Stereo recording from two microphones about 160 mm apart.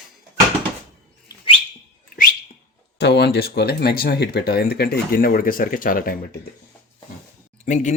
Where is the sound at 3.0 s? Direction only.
90° left; by 6.1 s 60° left (ahead or behind).